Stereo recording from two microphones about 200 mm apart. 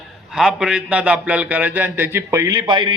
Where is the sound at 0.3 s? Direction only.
5° right (ahead or behind).